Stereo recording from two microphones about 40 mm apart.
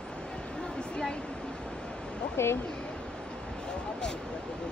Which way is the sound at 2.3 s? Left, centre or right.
Left.